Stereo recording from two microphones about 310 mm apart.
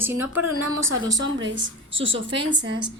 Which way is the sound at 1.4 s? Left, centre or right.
Right.